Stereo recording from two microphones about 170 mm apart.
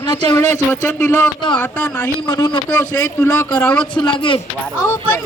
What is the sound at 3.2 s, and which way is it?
Speech, 15° left (ahead or behind).